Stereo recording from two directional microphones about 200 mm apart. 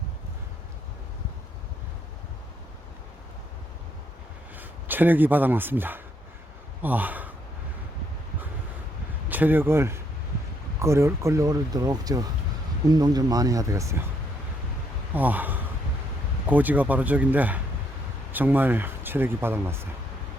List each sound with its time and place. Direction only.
4.5 s speech: 10° right (ahead or behind)
9.3 s speech: 10° right (ahead or behind)
15.1 s speech: 10° right (ahead or behind)